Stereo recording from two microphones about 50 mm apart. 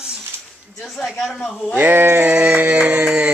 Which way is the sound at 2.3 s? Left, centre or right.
Right.